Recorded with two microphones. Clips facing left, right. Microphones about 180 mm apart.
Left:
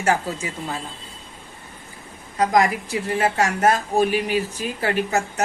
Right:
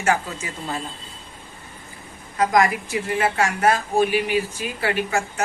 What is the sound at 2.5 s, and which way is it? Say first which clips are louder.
A woman's voice: even; 35° left (ahead or behind).